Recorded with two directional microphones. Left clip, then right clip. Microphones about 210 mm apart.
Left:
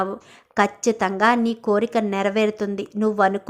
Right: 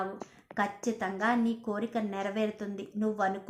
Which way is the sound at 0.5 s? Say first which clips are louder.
Left 12 dB; 30° left (ahead or behind).